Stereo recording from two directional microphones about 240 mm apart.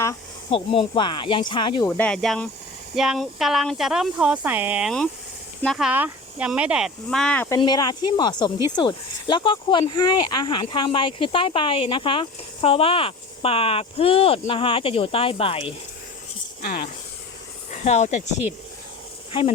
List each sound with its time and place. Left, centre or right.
0.5 s speech: left
2.0 s speech: centre
7.6 s speech: centre
16.6 s a sound: left
17.8 s speech: left